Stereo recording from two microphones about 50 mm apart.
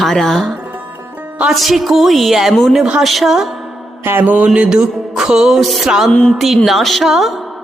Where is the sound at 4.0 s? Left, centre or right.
Right.